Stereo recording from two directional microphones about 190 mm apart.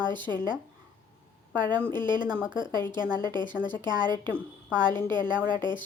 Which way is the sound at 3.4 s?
10° left (ahead or behind).